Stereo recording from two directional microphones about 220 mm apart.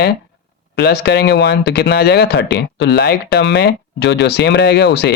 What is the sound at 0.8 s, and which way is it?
Speech, 50° left (ahead or behind).